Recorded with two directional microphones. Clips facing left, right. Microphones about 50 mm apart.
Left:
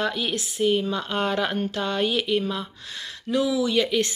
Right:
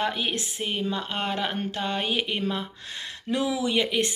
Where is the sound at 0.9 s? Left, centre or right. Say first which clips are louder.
Left 3 dB; right.